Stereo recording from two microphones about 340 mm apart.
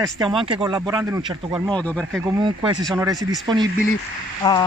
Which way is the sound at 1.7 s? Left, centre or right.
Centre.